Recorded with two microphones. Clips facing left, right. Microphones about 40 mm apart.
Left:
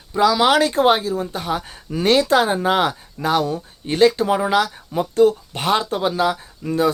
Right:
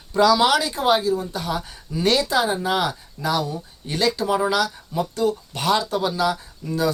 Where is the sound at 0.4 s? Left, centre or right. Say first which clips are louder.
Left 4 dB; left.